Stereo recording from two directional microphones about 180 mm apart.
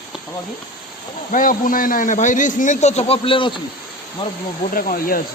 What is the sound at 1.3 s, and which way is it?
A man's voice, 50° left (ahead or behind).